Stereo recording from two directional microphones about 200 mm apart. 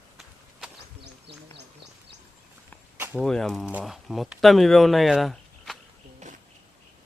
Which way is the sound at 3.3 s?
Centre (ahead or behind).